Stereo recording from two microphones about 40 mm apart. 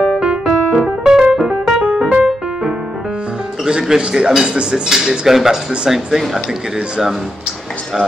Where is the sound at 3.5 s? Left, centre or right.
Centre.